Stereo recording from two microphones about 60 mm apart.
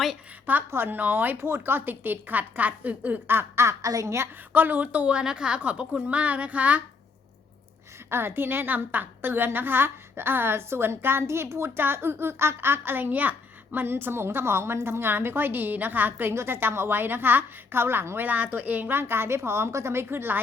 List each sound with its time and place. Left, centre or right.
0.7 s a woman's voice: right
3.8 s a woman's voice: right
4.5 s a woman's voice: right
8.1 s a woman's voice: right
16.3 s a woman's voice: right
18.2 s a woman's voice: right